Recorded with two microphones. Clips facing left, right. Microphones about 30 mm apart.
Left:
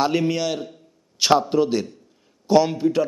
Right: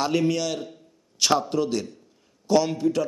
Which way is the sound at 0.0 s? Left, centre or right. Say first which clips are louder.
Left 2 dB; centre.